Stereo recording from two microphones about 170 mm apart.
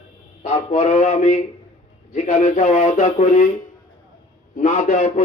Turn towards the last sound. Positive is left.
turn(degrees=45)  # may be behind; listen again after turning